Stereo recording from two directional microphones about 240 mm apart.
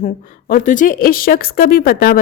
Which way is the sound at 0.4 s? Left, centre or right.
Left.